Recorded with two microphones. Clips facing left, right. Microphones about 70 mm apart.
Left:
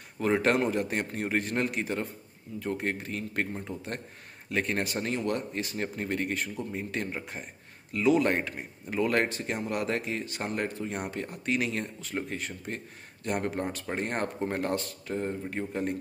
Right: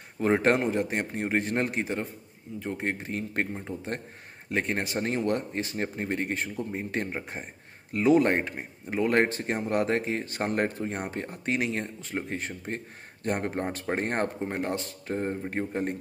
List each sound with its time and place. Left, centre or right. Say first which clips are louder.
0.2 s speech: right 2 dB; right
14.4 s speech: left 1 dB; centre
15.0 s speech: right 3 dB; right